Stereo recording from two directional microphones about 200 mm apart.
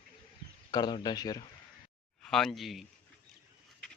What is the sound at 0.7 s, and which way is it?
Speech, 20° left (ahead or behind).